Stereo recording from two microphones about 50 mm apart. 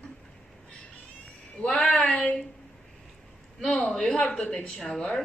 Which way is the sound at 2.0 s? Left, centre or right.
Left.